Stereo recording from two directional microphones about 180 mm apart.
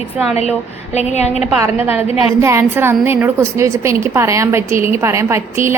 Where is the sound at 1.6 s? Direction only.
10° right (ahead or behind).